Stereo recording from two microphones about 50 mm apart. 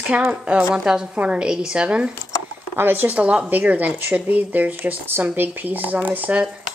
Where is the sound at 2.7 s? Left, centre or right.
Right.